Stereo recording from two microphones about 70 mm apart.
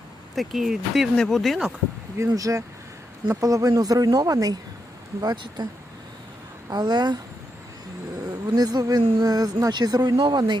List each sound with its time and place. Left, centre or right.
0.3 s speech: centre
2.3 s speech: right
5.2 s speech: right
6.7 s speech: right
8.3 s speech: right